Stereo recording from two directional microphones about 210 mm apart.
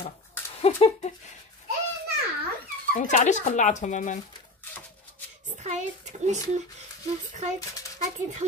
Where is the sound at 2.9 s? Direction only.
35° left (ahead or behind).